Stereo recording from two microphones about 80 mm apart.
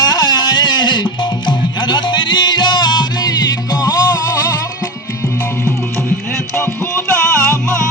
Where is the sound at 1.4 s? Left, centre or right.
Left.